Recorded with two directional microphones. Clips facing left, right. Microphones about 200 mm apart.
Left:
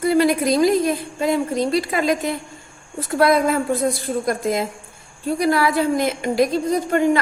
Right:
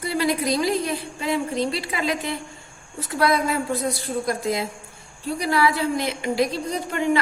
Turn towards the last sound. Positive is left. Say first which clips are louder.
# left 6 dB
turn(degrees=45)  # may be behind; listen again after turning